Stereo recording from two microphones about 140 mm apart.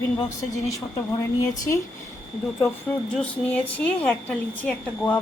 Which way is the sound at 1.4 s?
20° left (ahead or behind).